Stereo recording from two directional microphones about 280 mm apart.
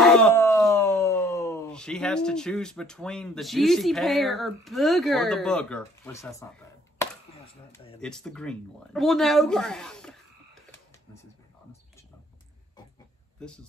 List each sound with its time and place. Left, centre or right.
0.0 s speech: centre
7.7 s a sound: centre
8.0 s speech: centre